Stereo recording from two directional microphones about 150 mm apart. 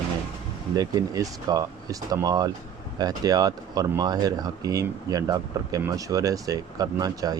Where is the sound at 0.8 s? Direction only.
25° right (ahead or behind).